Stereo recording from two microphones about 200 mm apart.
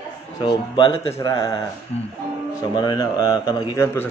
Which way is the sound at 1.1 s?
20° left (ahead or behind).